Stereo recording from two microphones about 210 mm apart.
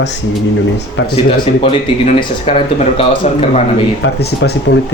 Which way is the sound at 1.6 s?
30° left (ahead or behind).